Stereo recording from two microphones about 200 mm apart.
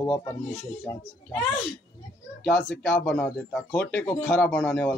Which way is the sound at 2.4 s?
5° left (ahead or behind).